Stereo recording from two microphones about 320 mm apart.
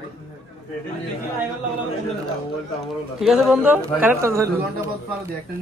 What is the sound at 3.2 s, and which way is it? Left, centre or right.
A man's voice, centre.